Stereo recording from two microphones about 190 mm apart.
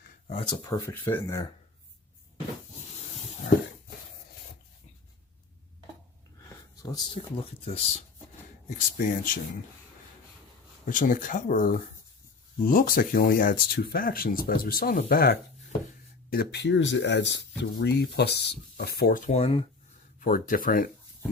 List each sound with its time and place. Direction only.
0.3 s speech: 25° left (ahead or behind)
6.8 s speech: 25° left (ahead or behind)
9.0 s speech: 45° left (ahead or behind)
10.8 s speech: 45° left (ahead or behind)
20.1 s a sound: 45° left (ahead or behind)
20.5 s speech: 45° left (ahead or behind)